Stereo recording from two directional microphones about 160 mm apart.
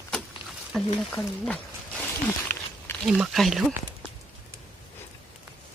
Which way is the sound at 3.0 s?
5° right (ahead or behind).